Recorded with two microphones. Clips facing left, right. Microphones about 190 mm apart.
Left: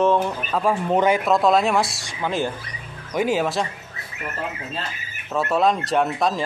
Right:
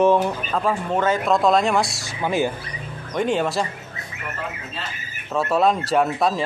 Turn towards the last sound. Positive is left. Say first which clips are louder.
# right 1 dB
turn(degrees=0)  # may be behind; listen again after turning